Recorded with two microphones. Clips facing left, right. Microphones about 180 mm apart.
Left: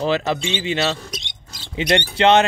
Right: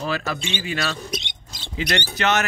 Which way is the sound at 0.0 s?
25° left (ahead or behind).